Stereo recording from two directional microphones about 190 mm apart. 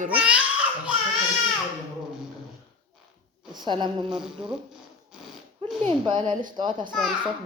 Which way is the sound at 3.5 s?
25° right (ahead or behind).